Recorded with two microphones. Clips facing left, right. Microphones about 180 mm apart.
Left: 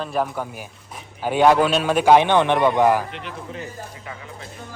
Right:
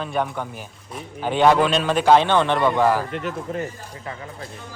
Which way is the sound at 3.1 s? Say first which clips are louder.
Right 6 dB; 45° right (ahead or behind).